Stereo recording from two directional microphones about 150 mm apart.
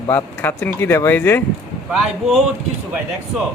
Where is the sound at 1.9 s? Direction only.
5° right (ahead or behind).